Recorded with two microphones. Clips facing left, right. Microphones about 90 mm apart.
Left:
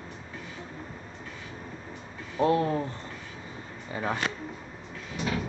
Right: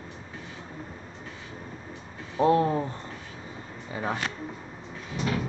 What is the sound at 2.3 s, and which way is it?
Speech, 20° right (ahead or behind).